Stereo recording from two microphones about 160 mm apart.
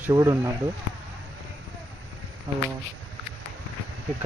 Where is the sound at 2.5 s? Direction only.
15° right (ahead or behind).